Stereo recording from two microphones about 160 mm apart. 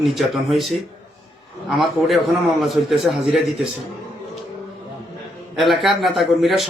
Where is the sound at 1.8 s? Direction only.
Centre (ahead or behind).